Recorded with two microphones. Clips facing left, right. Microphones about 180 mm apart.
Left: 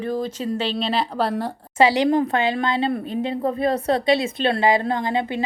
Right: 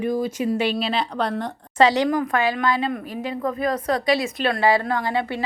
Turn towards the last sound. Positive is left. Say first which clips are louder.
# left 1 dB
turn(degrees=20)  # may be behind; listen again after turning